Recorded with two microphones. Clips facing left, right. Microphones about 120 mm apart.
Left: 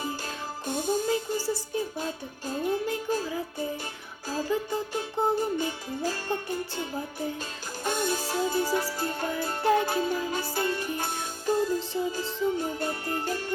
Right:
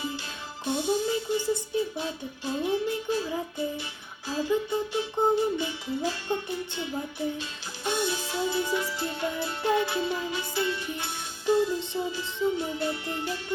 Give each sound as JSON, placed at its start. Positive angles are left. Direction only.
{"t": 0.6, "sound": "music", "side_deg": 45}
{"t": 1.7, "sound": "speech", "side_deg": 45}
{"t": 4.3, "sound": "music", "side_deg": 45}